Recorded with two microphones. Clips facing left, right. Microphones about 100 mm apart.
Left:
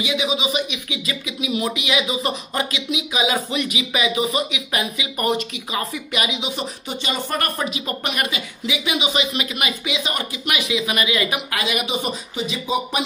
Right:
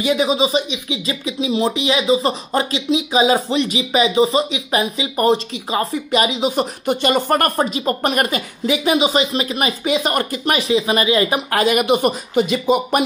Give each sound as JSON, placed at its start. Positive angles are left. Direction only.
{"t": 0.0, "sound": "speech", "side_deg": -40}